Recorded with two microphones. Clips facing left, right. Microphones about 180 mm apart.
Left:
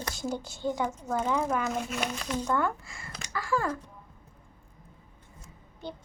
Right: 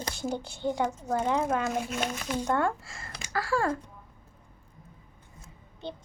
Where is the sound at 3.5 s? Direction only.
30° right (ahead or behind).